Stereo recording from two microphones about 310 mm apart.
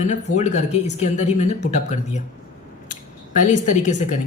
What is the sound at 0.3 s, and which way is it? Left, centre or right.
Speech, left.